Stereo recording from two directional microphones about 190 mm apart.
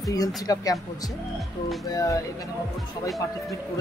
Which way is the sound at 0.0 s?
20° left (ahead or behind).